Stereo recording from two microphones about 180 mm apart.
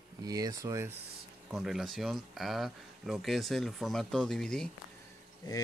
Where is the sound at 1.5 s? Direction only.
Centre (ahead or behind).